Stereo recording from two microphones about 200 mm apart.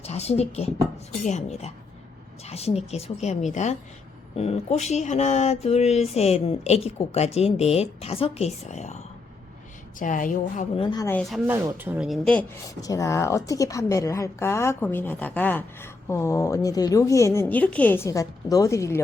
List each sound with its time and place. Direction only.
0.0 s speech: 30° left (ahead or behind)
10.0 s speech: 40° left (ahead or behind)
10.8 s a woman's voice: 15° left (ahead or behind)
11.2 s a woman's voice: centre (ahead or behind)
12.8 s a woman's voice: 15° left (ahead or behind)